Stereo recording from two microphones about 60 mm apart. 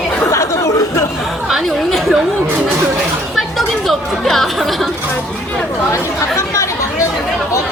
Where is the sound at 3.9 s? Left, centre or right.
Centre.